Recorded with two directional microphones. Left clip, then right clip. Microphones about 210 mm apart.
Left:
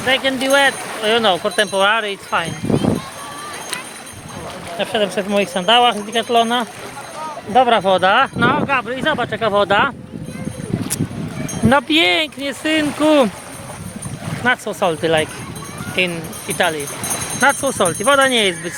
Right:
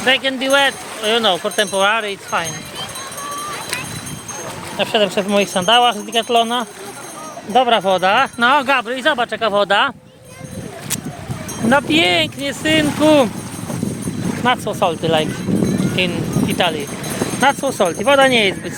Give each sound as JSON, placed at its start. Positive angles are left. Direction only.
{"t": 0.0, "sound": "speech", "side_deg": -30}
{"t": 4.8, "sound": "speech", "side_deg": -20}
{"t": 7.5, "sound": "speech", "side_deg": -10}
{"t": 11.7, "sound": "speech", "side_deg": 10}
{"t": 14.4, "sound": "speech", "side_deg": -15}